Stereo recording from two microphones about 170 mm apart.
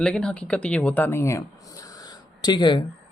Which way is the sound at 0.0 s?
5° left (ahead or behind).